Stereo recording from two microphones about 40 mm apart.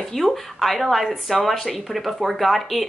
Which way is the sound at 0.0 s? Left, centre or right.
Centre.